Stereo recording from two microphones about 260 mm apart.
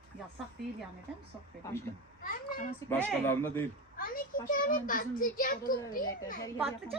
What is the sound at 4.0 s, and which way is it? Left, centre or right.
A child's voice, left.